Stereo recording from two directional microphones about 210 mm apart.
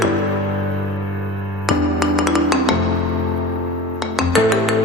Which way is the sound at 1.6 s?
Centre (ahead or behind).